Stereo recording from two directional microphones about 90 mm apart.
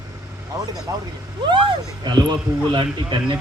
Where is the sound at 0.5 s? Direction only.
45° right (ahead or behind).